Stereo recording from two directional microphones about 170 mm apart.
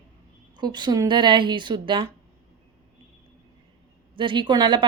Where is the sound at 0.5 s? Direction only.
25° right (ahead or behind).